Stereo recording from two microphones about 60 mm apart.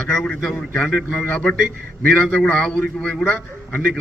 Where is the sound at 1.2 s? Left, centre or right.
Centre.